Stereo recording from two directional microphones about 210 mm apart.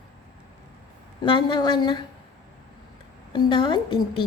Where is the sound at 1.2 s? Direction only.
20° left (ahead or behind).